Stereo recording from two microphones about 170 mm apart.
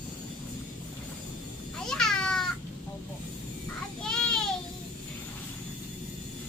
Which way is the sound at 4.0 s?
5° left (ahead or behind).